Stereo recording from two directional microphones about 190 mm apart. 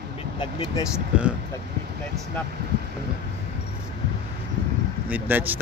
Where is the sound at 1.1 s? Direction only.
5° right (ahead or behind).